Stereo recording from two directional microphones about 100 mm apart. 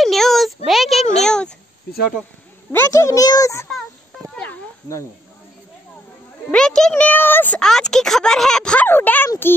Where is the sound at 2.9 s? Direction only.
30° left (ahead or behind).